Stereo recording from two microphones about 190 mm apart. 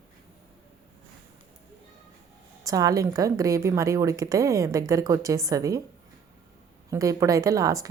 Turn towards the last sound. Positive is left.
turn(degrees=-15)  # may be behind; listen again after turning